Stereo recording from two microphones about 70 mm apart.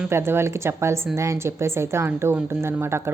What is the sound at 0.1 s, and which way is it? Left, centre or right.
A woman's voice, right.